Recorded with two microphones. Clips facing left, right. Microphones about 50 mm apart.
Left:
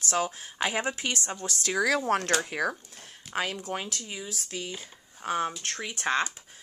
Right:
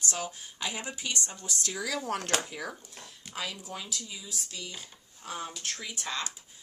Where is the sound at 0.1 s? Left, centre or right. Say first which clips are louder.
Left 8 dB; left.